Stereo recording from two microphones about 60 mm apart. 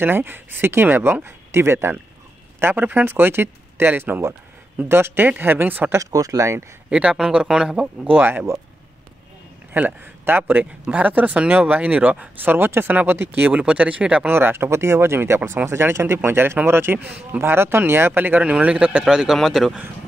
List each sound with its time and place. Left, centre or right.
0.0 s speech: right
5.9 s speech: right
6.9 s speech: centre
8.1 s speech: right
9.8 s speech: right
14.3 s speech: right
18.4 s speech: right
19.3 s speech: centre